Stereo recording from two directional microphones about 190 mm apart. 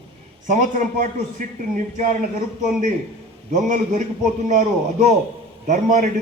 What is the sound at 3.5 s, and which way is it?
A man's voice, 40° right (ahead or behind).